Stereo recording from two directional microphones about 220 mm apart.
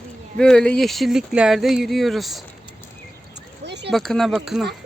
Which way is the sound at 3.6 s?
50° right (ahead or behind).